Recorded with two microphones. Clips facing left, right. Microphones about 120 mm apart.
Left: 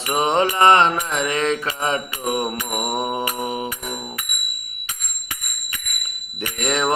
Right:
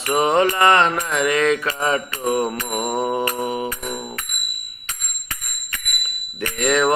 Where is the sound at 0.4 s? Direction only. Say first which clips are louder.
Left 1 dB; 25° left (ahead or behind).